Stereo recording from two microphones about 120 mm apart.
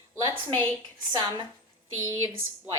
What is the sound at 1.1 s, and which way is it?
Speech, 40° right (ahead or behind).